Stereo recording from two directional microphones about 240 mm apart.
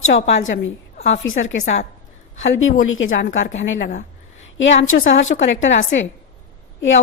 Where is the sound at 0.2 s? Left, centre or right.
Left.